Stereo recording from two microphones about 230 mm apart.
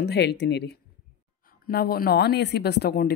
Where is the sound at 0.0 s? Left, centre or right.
Left.